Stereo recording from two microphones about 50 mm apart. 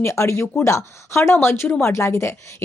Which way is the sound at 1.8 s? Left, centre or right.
Left.